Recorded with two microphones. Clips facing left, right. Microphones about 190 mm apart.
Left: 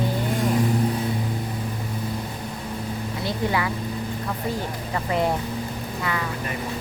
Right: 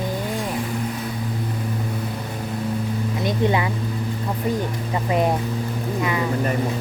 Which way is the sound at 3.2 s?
20° right (ahead or behind).